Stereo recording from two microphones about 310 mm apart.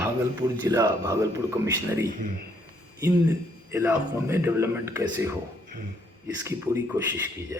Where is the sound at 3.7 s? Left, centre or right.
Centre.